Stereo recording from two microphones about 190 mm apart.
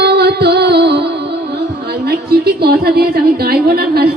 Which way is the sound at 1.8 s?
55° right (ahead or behind).